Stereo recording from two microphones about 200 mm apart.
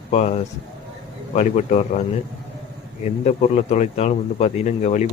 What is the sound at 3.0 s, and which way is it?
Speech, 35° left (ahead or behind).